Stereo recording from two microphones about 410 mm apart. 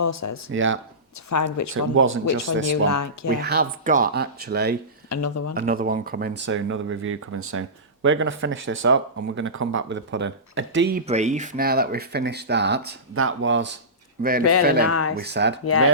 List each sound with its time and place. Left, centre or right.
0.0 s speech: left
0.5 s speech: right
1.3 s speech: left
1.7 s speech: right
2.8 s speech: left
3.2 s speech: right
5.0 s speech: left
5.5 s speech: right
14.8 s speech: left
15.2 s speech: right